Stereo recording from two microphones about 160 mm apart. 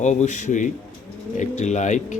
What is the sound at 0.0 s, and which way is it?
A man's voice, 50° left (ahead or behind).